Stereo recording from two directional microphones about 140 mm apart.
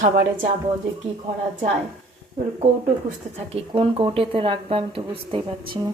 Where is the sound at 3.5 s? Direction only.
45° right (ahead or behind).